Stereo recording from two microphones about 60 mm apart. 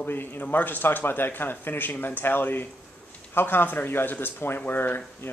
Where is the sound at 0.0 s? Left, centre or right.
Left.